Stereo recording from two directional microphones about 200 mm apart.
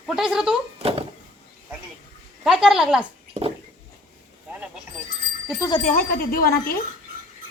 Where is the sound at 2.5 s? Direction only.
Centre (ahead or behind).